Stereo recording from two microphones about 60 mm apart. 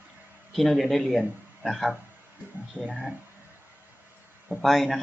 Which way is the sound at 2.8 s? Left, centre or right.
Left.